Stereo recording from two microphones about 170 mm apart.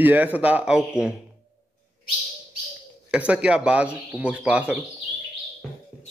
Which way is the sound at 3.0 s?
5° right (ahead or behind).